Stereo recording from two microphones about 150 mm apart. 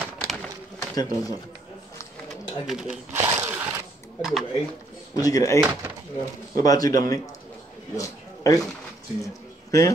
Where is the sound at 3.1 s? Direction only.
25° right (ahead or behind).